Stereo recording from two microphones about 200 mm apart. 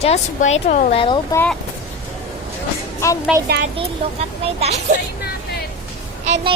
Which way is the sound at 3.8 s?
30° right (ahead or behind).